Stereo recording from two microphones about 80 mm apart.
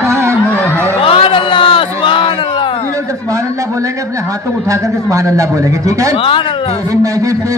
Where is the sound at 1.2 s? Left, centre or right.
Left.